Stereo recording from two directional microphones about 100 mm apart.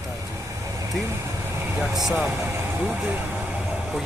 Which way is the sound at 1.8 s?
Centre (ahead or behind).